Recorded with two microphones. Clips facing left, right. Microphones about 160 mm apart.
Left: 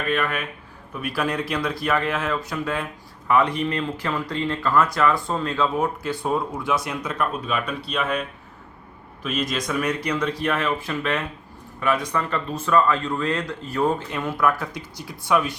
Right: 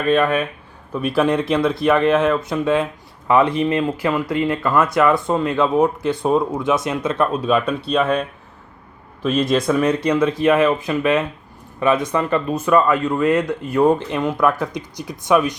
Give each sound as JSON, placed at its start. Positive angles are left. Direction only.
{"t": 0.1, "sound": "speech", "side_deg": -30}
{"t": 5.2, "sound": "speech", "side_deg": -5}
{"t": 5.5, "sound": "speech", "side_deg": -20}
{"t": 9.2, "sound": "speech", "side_deg": -30}